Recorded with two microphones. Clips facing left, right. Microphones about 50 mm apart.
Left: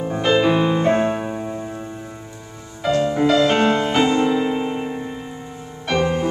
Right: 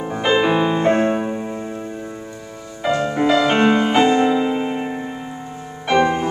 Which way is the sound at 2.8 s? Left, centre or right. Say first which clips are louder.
Left 1 dB; centre.